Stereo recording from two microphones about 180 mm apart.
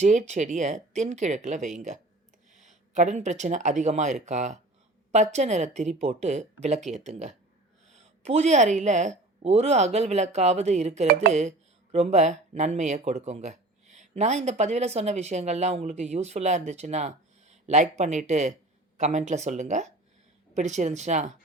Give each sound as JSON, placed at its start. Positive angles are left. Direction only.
{"t": 0.0, "sound": "speech", "side_deg": -40}